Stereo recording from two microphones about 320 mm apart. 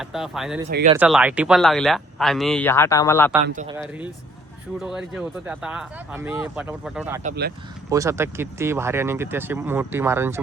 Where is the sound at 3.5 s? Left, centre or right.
Right.